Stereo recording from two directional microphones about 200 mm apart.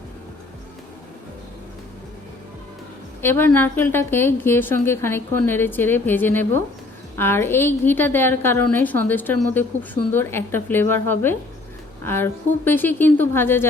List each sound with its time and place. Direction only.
3.2 s a woman's voice: 10° left (ahead or behind)